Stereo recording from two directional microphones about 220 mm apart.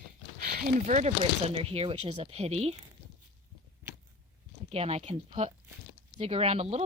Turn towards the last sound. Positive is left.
turn(degrees=-30)  # may be behind; listen again after turning